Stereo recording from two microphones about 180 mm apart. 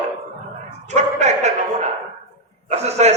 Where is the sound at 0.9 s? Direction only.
40° right (ahead or behind).